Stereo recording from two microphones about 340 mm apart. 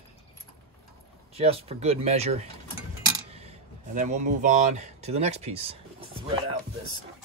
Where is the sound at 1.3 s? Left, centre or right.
Centre.